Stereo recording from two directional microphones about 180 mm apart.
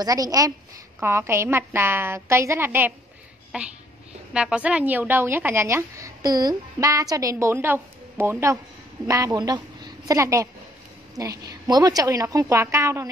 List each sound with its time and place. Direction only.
0.0 s a woman's voice: 20° right (ahead or behind)